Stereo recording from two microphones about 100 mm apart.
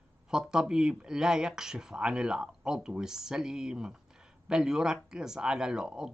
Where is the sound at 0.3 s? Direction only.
5° right (ahead or behind).